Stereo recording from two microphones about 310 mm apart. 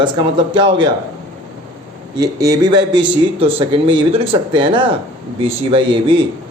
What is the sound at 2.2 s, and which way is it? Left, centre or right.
A man's voice, centre.